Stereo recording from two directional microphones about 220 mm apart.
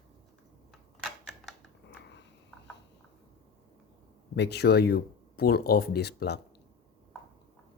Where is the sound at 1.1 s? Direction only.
Centre (ahead or behind).